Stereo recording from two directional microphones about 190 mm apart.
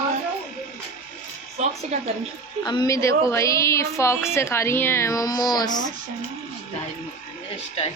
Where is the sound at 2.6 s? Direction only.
20° left (ahead or behind).